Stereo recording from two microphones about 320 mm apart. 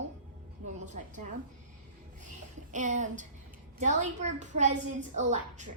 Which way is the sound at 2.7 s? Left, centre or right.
Right.